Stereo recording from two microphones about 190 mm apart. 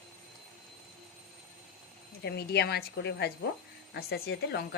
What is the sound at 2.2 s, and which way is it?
A woman's voice, 60° left (ahead or behind).